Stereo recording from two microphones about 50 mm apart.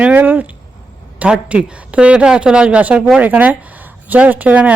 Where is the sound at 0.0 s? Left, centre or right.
Right.